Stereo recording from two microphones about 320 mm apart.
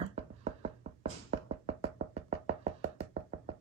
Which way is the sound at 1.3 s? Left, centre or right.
Centre.